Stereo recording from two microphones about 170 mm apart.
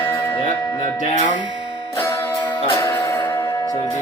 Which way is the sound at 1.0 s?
45° left (ahead or behind).